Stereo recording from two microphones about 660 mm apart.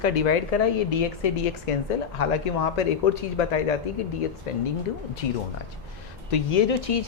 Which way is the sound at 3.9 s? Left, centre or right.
Left.